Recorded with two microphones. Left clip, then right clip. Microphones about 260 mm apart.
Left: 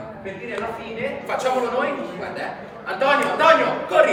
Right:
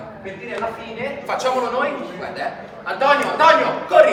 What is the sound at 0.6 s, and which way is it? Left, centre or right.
A man's voice, centre.